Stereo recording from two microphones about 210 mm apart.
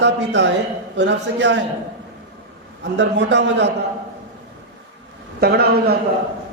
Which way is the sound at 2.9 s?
60° right (ahead or behind).